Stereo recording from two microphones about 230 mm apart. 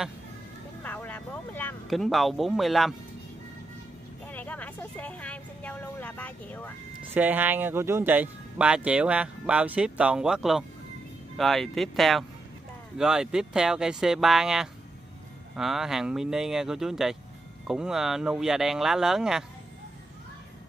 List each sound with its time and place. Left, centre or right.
0.8 s speech: centre
4.3 s vehicle: centre
7.2 s speech: centre